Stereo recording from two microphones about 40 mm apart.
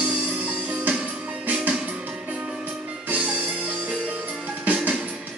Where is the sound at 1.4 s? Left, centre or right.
Right.